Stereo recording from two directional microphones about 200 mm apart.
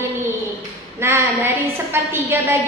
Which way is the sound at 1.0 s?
15° right (ahead or behind).